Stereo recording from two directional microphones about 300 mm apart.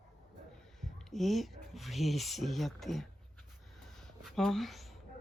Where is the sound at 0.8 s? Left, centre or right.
Centre.